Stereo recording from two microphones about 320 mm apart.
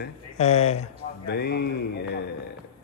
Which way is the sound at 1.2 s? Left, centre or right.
Left.